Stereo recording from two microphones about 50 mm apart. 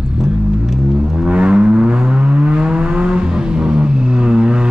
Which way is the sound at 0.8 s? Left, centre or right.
Centre.